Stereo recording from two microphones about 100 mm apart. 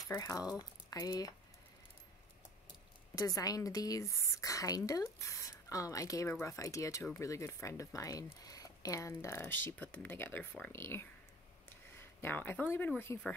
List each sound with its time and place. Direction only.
0.1 s a woman's voice: 35° left (ahead or behind)
3.2 s a woman's voice: 35° left (ahead or behind)
9.2 s speech: 25° left (ahead or behind)